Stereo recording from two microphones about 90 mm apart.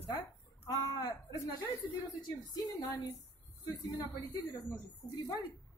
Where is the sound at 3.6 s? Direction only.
40° left (ahead or behind).